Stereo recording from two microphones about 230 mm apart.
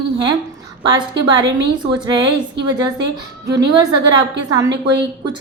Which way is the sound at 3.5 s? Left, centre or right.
Centre.